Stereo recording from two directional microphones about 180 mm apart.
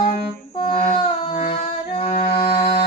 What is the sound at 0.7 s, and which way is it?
Humming, 35° left (ahead or behind).